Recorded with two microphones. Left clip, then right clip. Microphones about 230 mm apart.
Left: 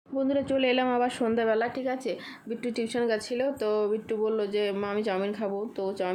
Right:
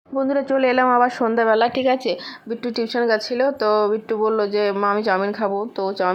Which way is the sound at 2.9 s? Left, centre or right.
Centre.